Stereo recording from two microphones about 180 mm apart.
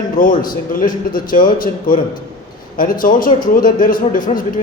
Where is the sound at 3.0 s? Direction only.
50° left (ahead or behind).